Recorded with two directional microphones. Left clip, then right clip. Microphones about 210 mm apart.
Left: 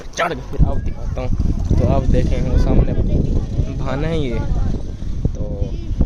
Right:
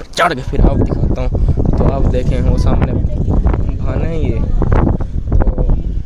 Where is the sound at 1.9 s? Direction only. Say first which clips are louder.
Right 2 dB; 20° right (ahead or behind).